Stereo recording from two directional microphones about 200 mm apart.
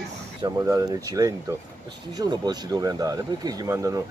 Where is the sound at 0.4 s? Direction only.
15° right (ahead or behind).